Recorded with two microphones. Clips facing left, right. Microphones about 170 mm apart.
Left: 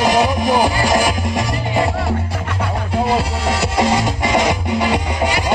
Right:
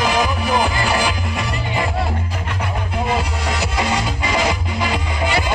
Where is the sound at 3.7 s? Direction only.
40° left (ahead or behind).